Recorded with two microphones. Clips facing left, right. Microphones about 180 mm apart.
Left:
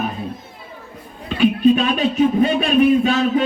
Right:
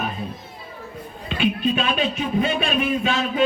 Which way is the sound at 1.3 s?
40° left (ahead or behind).